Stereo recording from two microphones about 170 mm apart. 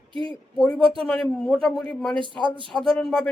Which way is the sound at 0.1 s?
30° right (ahead or behind).